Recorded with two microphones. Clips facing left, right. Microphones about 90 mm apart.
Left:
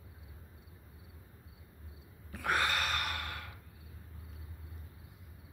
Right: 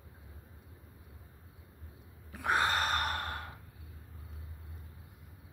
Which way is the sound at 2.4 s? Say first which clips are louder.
Right 2 dB; 30° right (ahead or behind).